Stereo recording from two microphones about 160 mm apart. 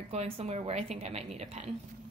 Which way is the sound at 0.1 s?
40° right (ahead or behind).